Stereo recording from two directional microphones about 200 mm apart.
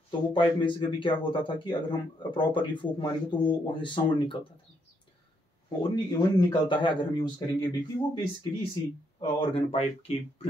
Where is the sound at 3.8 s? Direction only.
25° left (ahead or behind).